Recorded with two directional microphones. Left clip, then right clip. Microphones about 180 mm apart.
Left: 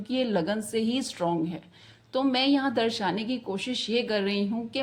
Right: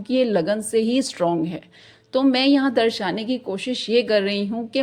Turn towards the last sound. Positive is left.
turn(degrees=-40)  # may be behind; listen again after turning